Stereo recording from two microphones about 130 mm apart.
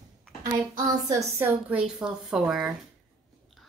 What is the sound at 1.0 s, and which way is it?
Speech, 25° right (ahead or behind).